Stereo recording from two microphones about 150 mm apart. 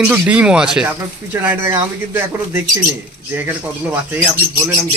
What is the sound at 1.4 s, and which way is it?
Speech, 15° right (ahead or behind).